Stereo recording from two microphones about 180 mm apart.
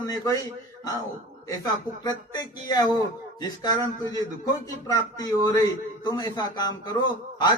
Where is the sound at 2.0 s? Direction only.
20° left (ahead or behind).